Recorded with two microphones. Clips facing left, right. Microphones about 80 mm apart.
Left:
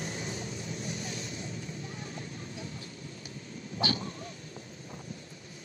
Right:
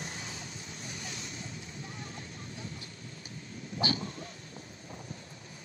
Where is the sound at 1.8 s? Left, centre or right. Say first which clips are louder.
Left 2 dB; right.